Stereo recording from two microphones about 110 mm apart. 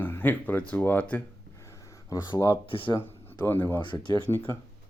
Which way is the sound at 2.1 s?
30° left (ahead or behind).